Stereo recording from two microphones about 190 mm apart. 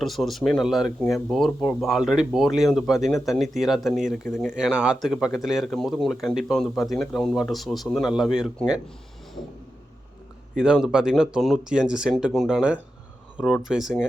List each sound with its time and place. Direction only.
0.0 s speech: centre (ahead or behind)
10.5 s speech: 5° right (ahead or behind)